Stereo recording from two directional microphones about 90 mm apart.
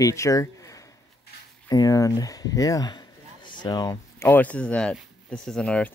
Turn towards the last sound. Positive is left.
turn(degrees=10)  # may be behind; listen again after turning